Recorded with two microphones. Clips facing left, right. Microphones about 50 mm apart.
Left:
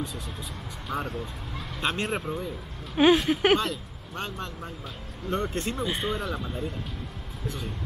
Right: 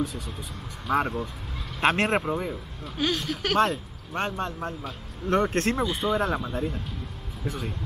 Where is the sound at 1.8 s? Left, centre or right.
Right.